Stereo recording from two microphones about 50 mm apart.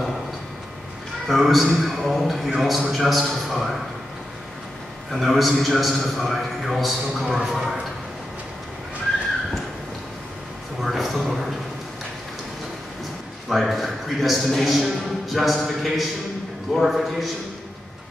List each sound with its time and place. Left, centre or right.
1.2 s a man's voice: centre
5.1 s a man's voice: centre
10.8 s a sound: centre
13.5 s a man's voice: centre